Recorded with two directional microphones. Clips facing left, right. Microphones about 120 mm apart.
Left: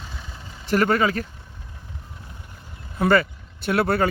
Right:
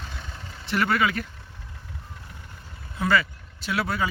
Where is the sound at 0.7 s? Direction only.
40° left (ahead or behind).